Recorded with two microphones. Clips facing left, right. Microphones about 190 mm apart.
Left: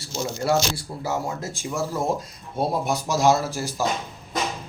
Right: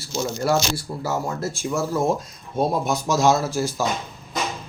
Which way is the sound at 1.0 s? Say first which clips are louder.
Right 1 dB; 15° left (ahead or behind).